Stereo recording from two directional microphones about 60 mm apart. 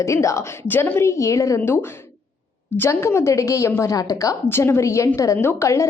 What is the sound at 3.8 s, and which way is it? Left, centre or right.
Speech, left.